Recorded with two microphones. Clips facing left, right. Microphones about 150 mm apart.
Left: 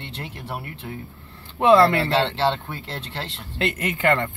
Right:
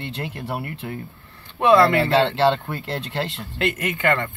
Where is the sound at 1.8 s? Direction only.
15° right (ahead or behind).